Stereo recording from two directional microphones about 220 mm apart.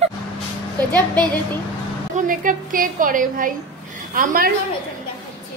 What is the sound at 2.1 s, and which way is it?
A woman's voice, 40° right (ahead or behind).